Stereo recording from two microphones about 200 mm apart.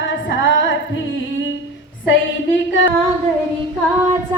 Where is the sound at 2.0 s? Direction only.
70° left (ahead or behind).